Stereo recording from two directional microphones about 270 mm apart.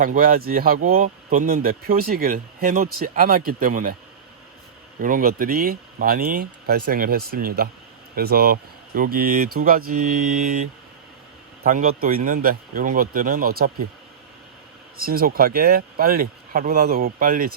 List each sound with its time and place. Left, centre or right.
0.0 s speech: right
4.9 s speech: right
14.9 s speech: right